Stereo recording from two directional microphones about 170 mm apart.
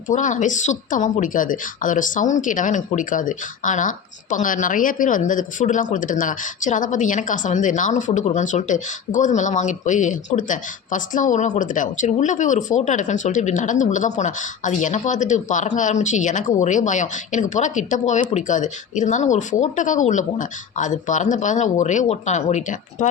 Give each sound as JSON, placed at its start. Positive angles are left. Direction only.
{"t": 0.1, "sound": "speech", "side_deg": 45}